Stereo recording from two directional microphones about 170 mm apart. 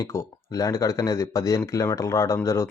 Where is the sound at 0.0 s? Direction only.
15° left (ahead or behind).